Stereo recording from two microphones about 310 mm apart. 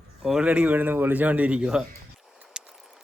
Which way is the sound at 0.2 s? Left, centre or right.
Centre.